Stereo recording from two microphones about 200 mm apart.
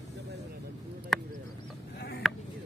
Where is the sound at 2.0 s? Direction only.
55° left (ahead or behind).